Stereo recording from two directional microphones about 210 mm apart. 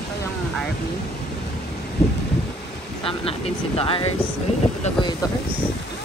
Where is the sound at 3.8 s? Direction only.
25° left (ahead or behind).